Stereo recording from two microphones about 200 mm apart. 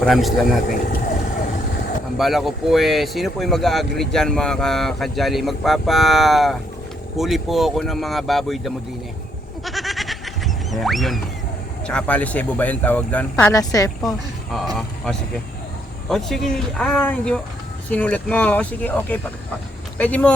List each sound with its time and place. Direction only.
0.0 s speech: centre (ahead or behind)
2.1 s speech: centre (ahead or behind)
9.6 s goat: centre (ahead or behind)
11.9 s speech: 5° left (ahead or behind)
13.3 s speech: 15° left (ahead or behind)
14.8 s speech: centre (ahead or behind)